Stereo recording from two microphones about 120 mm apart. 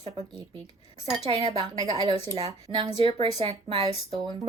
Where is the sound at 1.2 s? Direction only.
55° right (ahead or behind).